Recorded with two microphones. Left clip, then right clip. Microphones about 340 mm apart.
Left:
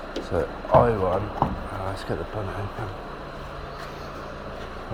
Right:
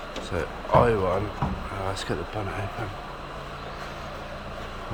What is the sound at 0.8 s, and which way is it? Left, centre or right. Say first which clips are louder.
Speech: right 3 dB; centre.